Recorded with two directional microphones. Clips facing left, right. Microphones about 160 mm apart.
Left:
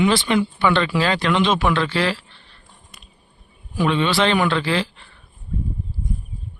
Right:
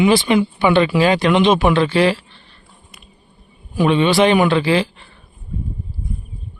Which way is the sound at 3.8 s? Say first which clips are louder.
Right 5 dB; 15° right (ahead or behind).